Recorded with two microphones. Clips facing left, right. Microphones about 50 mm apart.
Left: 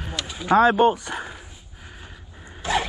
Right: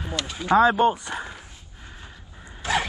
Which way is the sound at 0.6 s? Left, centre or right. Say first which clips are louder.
Left 2 dB; left.